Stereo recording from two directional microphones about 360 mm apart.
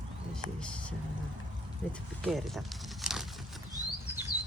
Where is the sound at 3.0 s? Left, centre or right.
Centre.